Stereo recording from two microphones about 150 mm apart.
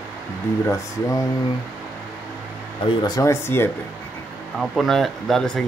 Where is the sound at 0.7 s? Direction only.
20° left (ahead or behind).